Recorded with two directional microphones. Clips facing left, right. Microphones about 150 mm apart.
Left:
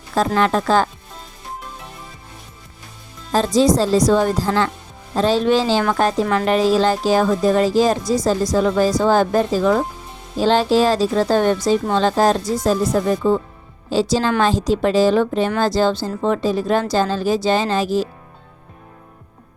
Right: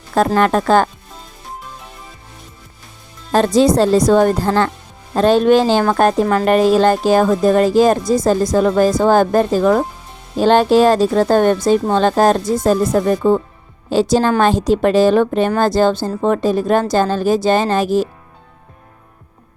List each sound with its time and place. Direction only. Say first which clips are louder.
0.3 s a woman's voice: right 3 dB; 50° right (ahead or behind)
3.3 s a woman's voice: right 3 dB; 60° right (ahead or behind)